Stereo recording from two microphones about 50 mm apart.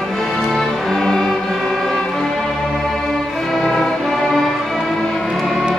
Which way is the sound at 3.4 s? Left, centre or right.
Centre.